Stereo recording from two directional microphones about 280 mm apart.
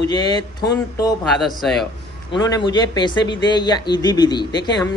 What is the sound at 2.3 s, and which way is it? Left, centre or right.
A man's voice, centre.